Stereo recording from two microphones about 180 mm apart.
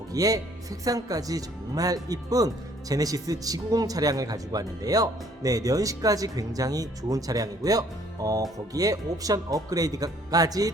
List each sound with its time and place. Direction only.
0.1 s speech: 20° right (ahead or behind)